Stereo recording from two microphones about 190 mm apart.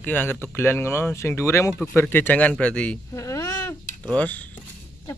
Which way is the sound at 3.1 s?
15° left (ahead or behind).